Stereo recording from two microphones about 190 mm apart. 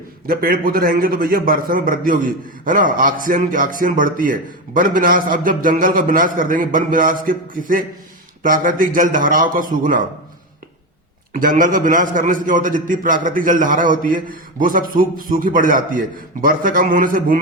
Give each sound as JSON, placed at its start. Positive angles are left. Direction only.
{"t": 0.3, "sound": "a man's voice", "side_deg": -50}
{"t": 11.3, "sound": "a man's voice", "side_deg": -45}